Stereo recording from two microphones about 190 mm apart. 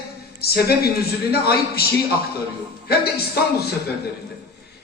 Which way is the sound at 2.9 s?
55° left (ahead or behind).